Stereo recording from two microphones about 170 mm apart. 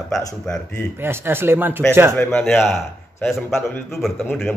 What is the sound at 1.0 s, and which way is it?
Speech, 15° right (ahead or behind).